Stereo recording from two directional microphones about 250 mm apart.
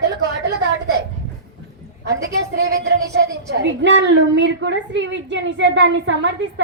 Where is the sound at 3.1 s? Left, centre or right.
Right.